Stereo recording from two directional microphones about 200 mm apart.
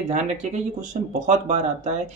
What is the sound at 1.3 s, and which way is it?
Speech, 35° right (ahead or behind).